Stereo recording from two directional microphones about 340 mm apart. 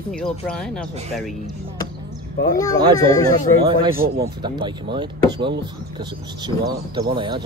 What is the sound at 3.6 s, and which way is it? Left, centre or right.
Speech, centre.